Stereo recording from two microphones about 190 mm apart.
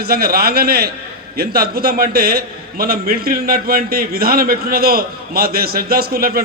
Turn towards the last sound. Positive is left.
turn(degrees=-50)  # may be behind; listen again after turning